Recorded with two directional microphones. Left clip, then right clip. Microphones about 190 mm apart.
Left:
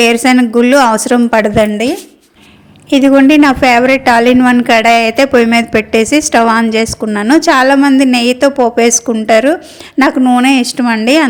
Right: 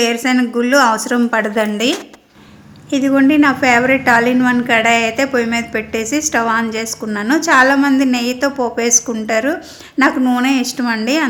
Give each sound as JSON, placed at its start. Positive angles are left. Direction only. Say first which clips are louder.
{"t": 0.0, "sound": "a woman's voice", "louder": "left 7 dB", "side_deg": 40}
{"t": 2.9, "sound": "a woman's voice", "louder": "left 7 dB", "side_deg": 40}